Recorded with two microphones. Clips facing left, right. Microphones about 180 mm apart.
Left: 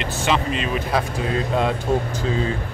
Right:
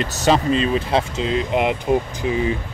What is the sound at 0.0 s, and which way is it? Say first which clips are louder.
Speech: right 4 dB; 40° right (ahead or behind).